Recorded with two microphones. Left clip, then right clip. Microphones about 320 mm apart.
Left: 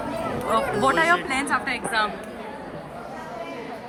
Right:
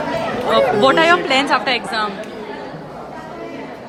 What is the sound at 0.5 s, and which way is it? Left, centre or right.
A woman's voice, centre.